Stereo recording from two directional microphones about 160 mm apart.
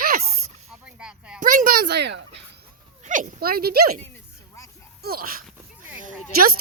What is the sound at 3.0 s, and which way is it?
Speech, 55° right (ahead or behind).